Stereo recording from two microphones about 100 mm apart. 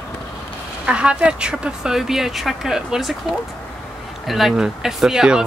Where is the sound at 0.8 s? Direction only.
10° right (ahead or behind).